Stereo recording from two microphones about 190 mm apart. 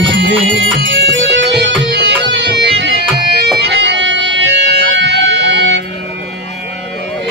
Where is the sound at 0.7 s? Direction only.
65° right (ahead or behind).